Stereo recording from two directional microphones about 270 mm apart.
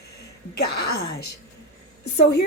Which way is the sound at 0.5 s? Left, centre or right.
Left.